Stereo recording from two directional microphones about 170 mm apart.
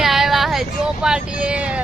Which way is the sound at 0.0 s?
Centre (ahead or behind).